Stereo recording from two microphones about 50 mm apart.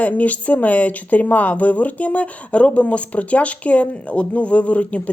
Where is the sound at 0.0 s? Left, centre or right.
Left.